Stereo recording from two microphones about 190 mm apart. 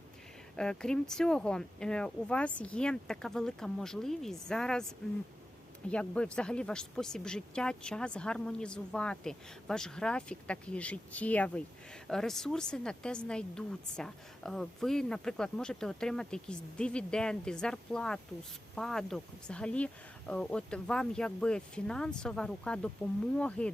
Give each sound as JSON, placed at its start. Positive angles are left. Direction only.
{"t": 0.5, "sound": "speech", "side_deg": 5}
{"t": 5.9, "sound": "speech", "side_deg": 5}